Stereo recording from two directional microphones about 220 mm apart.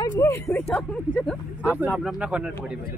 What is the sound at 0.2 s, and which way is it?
A man's voice, 10° left (ahead or behind).